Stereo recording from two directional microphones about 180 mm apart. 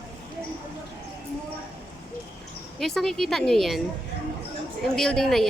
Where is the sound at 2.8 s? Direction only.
Centre (ahead or behind).